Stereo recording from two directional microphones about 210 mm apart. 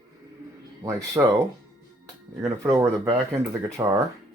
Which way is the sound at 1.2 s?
15° right (ahead or behind).